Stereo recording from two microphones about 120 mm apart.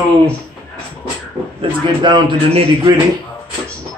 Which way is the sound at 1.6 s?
40° right (ahead or behind).